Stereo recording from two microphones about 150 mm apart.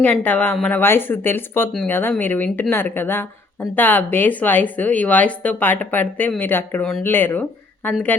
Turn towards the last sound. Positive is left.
turn(degrees=10)  # may be behind; listen again after turning